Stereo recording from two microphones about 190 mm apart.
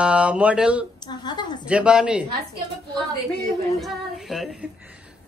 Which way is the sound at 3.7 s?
Centre (ahead or behind).